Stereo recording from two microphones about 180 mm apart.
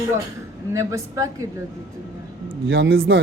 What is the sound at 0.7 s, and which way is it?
Speech, 15° right (ahead or behind).